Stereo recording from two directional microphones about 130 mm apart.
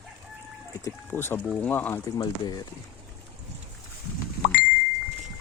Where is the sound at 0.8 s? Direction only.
20° left (ahead or behind).